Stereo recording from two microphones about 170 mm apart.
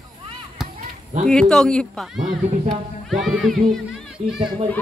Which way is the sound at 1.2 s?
5° left (ahead or behind).